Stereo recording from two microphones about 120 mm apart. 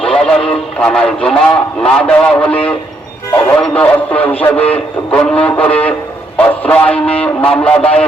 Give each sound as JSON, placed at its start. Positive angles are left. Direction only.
{"t": 0.0, "sound": "radio", "side_deg": 5}
{"t": 0.8, "sound": "a man's voice", "side_deg": 10}
{"t": 3.6, "sound": "a man's voice", "side_deg": 10}